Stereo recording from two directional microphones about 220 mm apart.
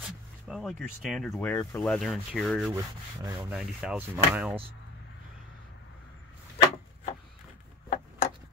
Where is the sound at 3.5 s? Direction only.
5° right (ahead or behind).